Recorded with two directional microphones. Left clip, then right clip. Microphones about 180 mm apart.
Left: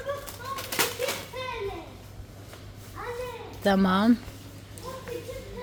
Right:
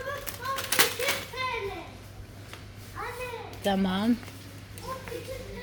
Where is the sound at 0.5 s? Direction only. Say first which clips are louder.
Right 3 dB; centre (ahead or behind).